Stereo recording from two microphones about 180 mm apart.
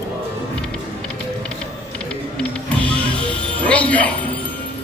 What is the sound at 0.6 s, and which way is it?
Music, 5° left (ahead or behind).